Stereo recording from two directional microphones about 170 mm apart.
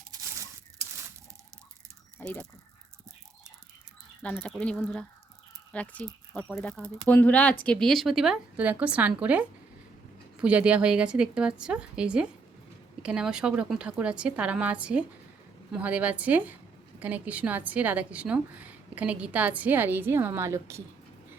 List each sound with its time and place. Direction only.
0.1 s a sound: 20° right (ahead or behind)
2.2 s speech: 10° left (ahead or behind)
4.2 s a woman's voice: 10° left (ahead or behind); by 20.8 s 15° right (ahead or behind)